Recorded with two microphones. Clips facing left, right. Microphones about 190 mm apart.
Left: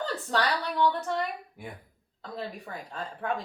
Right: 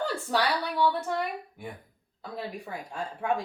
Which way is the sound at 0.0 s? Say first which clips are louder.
Right 1 dB; 10° right (ahead or behind).